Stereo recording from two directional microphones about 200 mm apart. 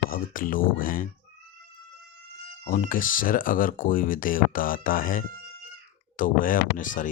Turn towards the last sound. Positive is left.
turn(degrees=40)  # may be behind; listen again after turning